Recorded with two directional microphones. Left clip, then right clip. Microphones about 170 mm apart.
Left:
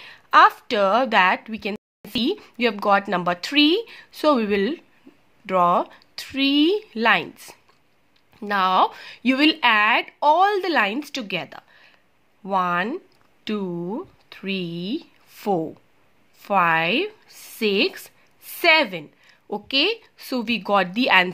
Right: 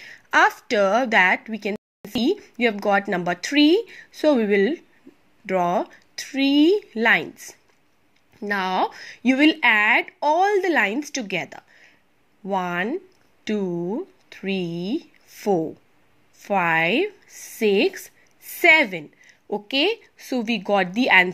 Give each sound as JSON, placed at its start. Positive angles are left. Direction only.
{"t": 0.0, "sound": "a woman's voice", "side_deg": -5}
{"t": 8.5, "sound": "speech", "side_deg": 0}
{"t": 14.7, "sound": "speech", "side_deg": -35}
{"t": 15.3, "sound": "speech", "side_deg": 0}
{"t": 17.9, "sound": "a sound", "side_deg": 0}
{"t": 20.2, "sound": "speech", "side_deg": 5}